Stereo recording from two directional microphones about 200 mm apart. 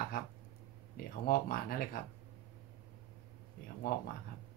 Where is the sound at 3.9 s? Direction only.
50° left (ahead or behind).